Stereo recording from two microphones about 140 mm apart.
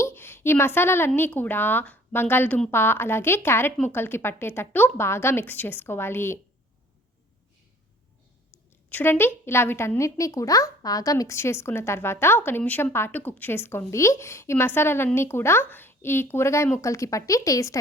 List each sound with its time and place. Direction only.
0.0 s a woman's voice: 15° left (ahead or behind)
8.9 s a woman's voice: 15° left (ahead or behind)